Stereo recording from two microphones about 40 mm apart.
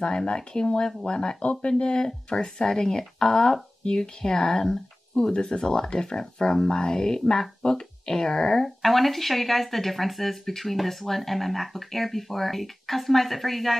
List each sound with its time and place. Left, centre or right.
0.0 s speech: centre
8.8 s speech: centre